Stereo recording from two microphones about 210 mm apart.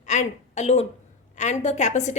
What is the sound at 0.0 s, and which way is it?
A woman's voice, 35° left (ahead or behind).